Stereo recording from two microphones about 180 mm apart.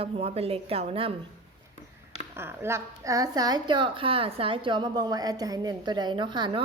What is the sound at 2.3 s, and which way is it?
A woman's voice, 15° right (ahead or behind).